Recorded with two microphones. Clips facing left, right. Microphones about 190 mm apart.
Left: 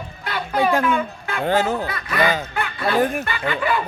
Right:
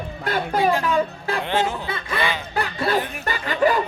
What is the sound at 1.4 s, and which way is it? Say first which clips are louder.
Speech: left 5 dB; 40° left (ahead or behind).